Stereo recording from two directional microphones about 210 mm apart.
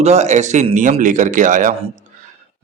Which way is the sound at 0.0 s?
30° right (ahead or behind).